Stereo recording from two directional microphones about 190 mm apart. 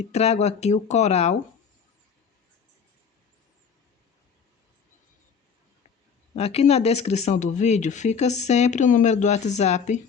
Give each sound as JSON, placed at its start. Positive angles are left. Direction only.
{"t": 0.0, "sound": "speech", "side_deg": 35}
{"t": 6.3, "sound": "speech", "side_deg": 30}